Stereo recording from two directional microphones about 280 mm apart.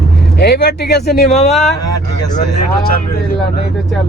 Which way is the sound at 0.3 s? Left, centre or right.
Left.